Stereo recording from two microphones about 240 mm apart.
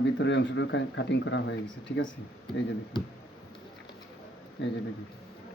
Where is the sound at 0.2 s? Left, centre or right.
Left.